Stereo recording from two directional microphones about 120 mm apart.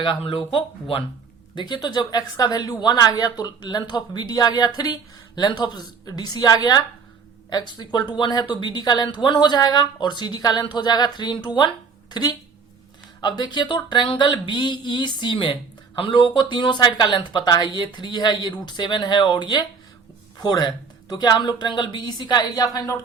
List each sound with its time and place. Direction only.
0.0 s speech: 45° left (ahead or behind)
1.5 s a woman's voice: 35° left (ahead or behind)